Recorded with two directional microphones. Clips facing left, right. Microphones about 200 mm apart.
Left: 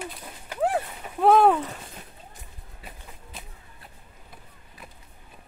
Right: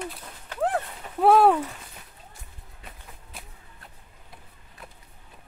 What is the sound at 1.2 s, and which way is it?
Speech, 5° right (ahead or behind).